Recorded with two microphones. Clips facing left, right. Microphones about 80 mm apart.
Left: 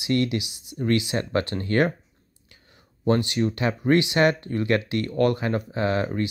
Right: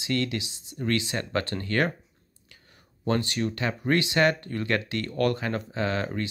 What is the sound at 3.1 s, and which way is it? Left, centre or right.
Speech, centre.